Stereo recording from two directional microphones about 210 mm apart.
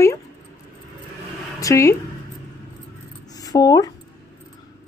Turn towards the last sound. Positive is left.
turn(degrees=15)  # may be behind; listen again after turning